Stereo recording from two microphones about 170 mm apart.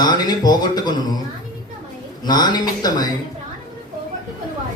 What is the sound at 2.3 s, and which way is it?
Speech, 25° left (ahead or behind).